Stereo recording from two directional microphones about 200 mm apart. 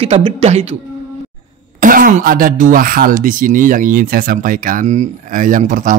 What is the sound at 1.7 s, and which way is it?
Speech, 45° right (ahead or behind).